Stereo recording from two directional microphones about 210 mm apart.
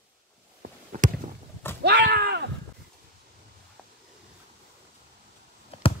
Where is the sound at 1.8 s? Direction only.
50° right (ahead or behind).